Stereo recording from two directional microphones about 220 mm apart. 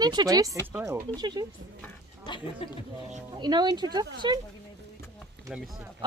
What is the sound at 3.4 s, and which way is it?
Speech, 20° right (ahead or behind).